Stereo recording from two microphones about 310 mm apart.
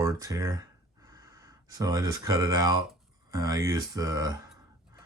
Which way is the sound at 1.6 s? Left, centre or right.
Centre.